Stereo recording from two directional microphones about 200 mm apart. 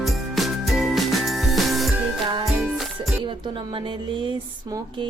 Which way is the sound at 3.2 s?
25° right (ahead or behind).